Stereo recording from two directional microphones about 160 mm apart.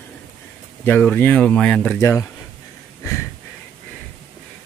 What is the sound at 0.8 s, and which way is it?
Speech, 10° left (ahead or behind).